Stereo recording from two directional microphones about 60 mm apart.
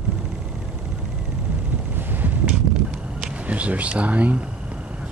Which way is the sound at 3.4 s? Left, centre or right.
Right.